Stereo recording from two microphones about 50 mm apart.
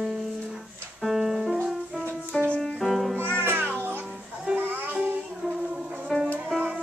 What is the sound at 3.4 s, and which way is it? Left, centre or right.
Music, right.